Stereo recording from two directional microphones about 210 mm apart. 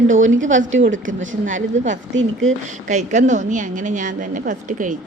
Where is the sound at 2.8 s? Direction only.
35° right (ahead or behind).